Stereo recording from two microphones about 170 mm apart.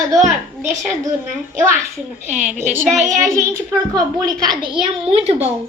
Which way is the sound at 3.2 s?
15° right (ahead or behind).